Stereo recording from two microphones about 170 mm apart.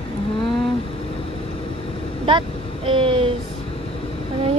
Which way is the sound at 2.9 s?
30° right (ahead or behind).